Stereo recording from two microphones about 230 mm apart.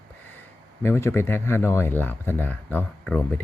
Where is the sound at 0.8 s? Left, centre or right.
Centre.